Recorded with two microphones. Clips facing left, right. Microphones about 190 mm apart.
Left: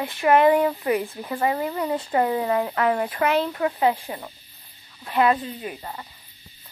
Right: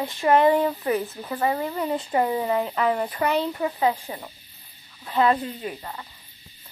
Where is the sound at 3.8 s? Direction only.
20° left (ahead or behind).